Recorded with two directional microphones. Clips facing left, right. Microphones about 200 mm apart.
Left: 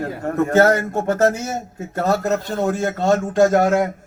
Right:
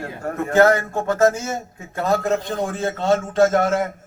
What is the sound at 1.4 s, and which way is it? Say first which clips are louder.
A man's voice: left 2 dB; 40° left (ahead or behind).